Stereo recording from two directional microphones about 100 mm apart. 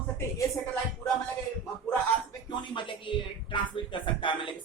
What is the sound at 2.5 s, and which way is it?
Speech, 55° left (ahead or behind).